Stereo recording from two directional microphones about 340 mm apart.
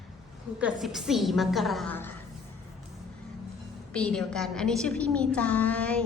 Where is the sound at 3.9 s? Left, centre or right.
Centre.